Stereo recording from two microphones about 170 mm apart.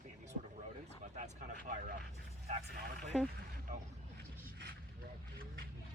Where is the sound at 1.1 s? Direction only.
45° right (ahead or behind).